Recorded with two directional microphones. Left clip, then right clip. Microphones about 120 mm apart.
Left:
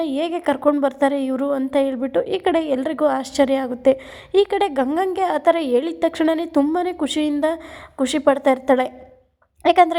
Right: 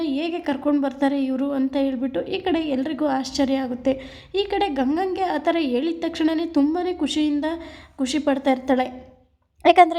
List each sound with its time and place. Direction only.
0.0 s a woman's voice: 45° left (ahead or behind)
9.6 s speech: centre (ahead or behind)